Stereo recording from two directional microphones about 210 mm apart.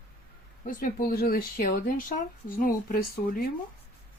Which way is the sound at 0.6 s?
40° left (ahead or behind).